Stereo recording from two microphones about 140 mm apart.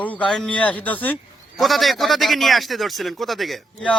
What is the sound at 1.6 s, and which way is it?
Speech, centre (ahead or behind).